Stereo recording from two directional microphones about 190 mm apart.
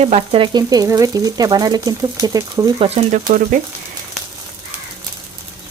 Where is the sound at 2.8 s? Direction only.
30° right (ahead or behind).